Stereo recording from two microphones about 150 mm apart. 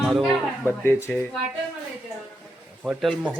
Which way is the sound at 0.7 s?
15° left (ahead or behind).